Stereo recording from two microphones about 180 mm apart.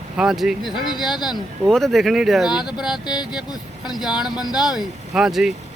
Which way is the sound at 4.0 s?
5° right (ahead or behind).